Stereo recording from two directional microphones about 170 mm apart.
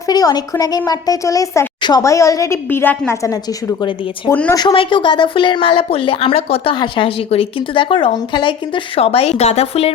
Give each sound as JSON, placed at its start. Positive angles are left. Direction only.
{"t": 0.1, "sound": "a woman's voice", "side_deg": 25}
{"t": 4.3, "sound": "a woman's voice", "side_deg": 10}
{"t": 4.5, "sound": "speech", "side_deg": 30}